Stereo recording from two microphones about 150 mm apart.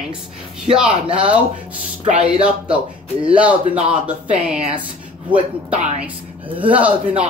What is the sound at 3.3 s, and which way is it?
Speech, 10° right (ahead or behind).